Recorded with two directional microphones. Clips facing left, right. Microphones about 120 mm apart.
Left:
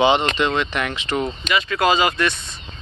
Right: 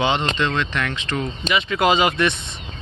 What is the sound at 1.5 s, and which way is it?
Speech, 20° right (ahead or behind).